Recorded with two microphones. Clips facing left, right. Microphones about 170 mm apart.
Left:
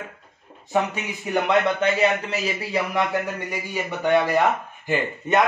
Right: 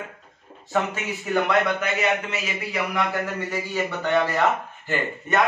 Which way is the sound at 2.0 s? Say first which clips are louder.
Left 3 dB; 35° left (ahead or behind).